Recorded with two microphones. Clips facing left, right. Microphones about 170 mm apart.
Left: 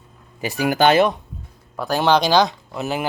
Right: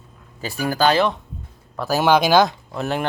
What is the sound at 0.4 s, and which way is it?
Speech, 20° left (ahead or behind).